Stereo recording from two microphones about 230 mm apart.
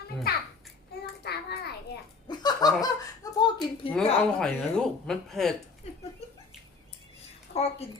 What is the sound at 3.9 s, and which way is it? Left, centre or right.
Speech, centre.